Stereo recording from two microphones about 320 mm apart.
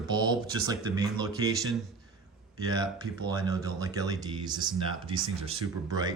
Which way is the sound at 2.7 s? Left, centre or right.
Centre.